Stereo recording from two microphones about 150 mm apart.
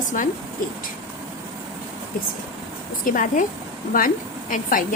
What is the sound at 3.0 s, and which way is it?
A woman's voice, 65° left (ahead or behind).